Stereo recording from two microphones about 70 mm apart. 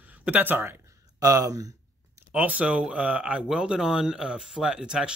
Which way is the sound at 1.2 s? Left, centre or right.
Right.